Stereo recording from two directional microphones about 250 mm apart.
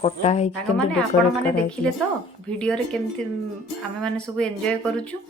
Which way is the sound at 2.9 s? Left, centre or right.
Centre.